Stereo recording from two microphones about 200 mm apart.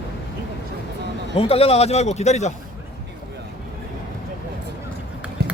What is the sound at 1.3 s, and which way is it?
A man's voice, 30° left (ahead or behind).